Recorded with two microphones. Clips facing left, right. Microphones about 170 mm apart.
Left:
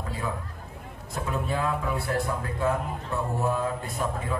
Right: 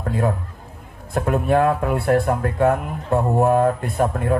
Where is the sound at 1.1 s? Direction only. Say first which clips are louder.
Right 11 dB; 60° right (ahead or behind).